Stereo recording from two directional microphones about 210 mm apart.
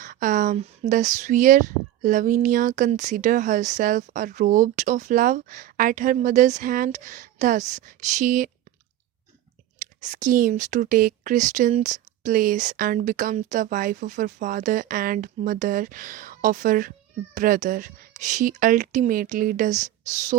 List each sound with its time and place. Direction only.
0.0 s speech: 40° right (ahead or behind)
10.0 s speech: 35° right (ahead or behind)